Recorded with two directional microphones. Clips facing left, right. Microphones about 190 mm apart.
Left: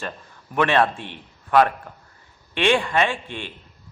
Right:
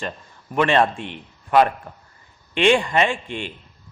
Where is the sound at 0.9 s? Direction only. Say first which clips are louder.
Right 4 dB; 50° right (ahead or behind).